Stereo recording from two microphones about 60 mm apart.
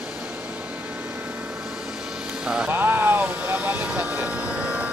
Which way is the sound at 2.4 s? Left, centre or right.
Centre.